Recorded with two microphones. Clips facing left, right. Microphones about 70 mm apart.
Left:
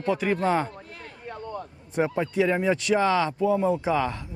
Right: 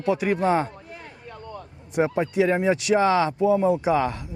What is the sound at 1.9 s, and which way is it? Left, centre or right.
Speech, centre.